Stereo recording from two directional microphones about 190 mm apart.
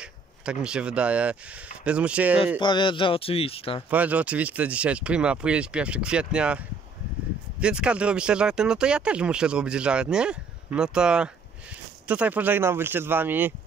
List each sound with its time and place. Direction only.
0.0 s speech: 5° right (ahead or behind)
2.6 s a man's voice: 25° left (ahead or behind)
3.9 s speech: 10° right (ahead or behind)
7.6 s speech: 5° right (ahead or behind)